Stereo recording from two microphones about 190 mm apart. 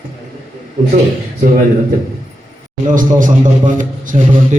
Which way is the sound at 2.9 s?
45° right (ahead or behind).